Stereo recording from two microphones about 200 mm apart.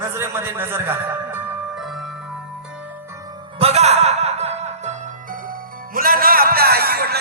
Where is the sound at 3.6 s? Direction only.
30° right (ahead or behind); by 7.2 s 50° right (ahead or behind).